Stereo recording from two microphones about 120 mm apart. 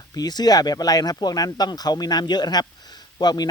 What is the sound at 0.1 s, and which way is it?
Speech, 35° left (ahead or behind).